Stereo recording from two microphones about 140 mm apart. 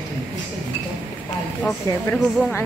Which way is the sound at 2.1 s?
10° left (ahead or behind).